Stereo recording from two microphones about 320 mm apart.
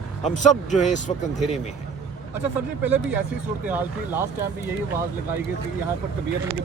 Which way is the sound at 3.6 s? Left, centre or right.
Centre.